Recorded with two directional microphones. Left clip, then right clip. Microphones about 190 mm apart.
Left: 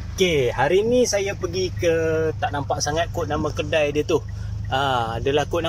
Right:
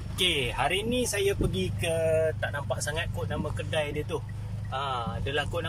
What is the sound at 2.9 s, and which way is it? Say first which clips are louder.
Speech: left 10 dB; 50° left (ahead or behind).